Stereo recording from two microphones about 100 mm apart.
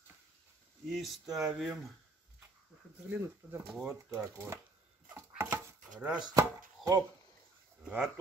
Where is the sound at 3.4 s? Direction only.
15° right (ahead or behind).